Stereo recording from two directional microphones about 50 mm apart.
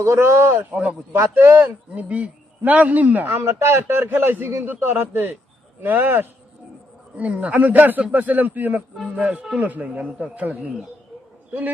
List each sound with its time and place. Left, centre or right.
0.0 s speech: right
0.7 s a man's voice: right
1.3 s a man's voice: right
2.0 s a man's voice: right
3.2 s a man's voice: right
7.2 s a man's voice: right